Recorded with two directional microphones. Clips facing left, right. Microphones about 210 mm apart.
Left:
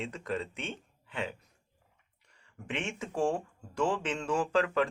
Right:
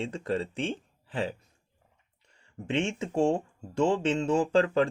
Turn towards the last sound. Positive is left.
turn(degrees=-25)  # may be behind; listen again after turning